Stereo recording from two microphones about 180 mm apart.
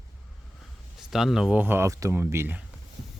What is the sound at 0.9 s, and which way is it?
Speech, centre (ahead or behind).